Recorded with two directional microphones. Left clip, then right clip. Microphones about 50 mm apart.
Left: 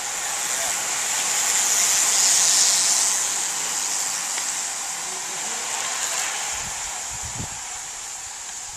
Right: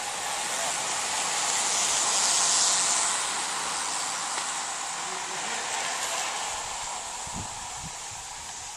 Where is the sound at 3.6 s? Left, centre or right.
Left.